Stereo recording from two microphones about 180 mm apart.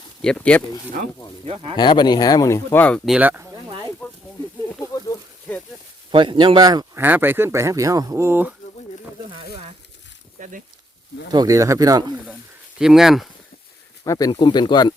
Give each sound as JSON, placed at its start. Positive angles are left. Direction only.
{"t": 0.2, "sound": "speech", "side_deg": 5}
{"t": 1.5, "sound": "speech", "side_deg": -30}
{"t": 1.7, "sound": "speech", "side_deg": 25}
{"t": 3.1, "sound": "speech", "side_deg": -10}
{"t": 3.5, "sound": "a sound", "side_deg": -25}
{"t": 5.1, "sound": "a sound", "side_deg": 15}
{"t": 6.1, "sound": "speech", "side_deg": -25}
{"t": 10.4, "sound": "a sound", "side_deg": -45}
{"t": 11.3, "sound": "speech", "side_deg": -20}
{"t": 12.8, "sound": "speech", "side_deg": 0}
{"t": 14.0, "sound": "speech", "side_deg": 20}